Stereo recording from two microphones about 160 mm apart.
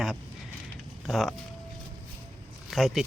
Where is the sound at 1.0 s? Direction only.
Centre (ahead or behind).